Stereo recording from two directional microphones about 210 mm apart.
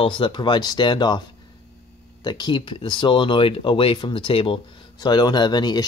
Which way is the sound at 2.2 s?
20° left (ahead or behind).